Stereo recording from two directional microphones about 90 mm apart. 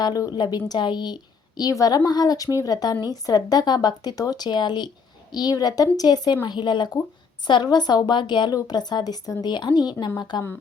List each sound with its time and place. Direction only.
0.0 s a woman's voice: 45° left (ahead or behind)